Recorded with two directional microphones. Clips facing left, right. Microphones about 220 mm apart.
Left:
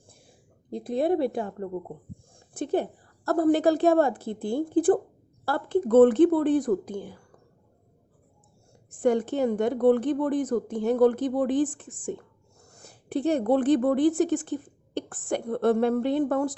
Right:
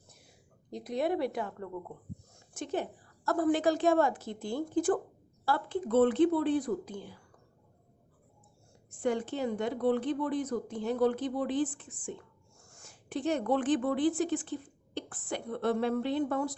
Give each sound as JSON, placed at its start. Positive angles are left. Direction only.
{"t": 0.1, "sound": "a sound", "side_deg": 30}
{"t": 1.5, "sound": "speech", "side_deg": 35}
{"t": 4.2, "sound": "speech", "side_deg": 55}
{"t": 5.5, "sound": "speech", "side_deg": 45}
{"t": 9.0, "sound": "speech", "side_deg": 45}
{"t": 12.0, "sound": "whispering", "side_deg": 45}
{"t": 12.8, "sound": "a sound", "side_deg": 35}
{"t": 13.2, "sound": "speech", "side_deg": 35}